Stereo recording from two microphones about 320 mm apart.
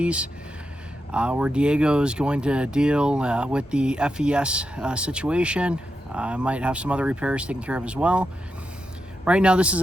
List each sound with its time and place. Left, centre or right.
0.0 s speech: centre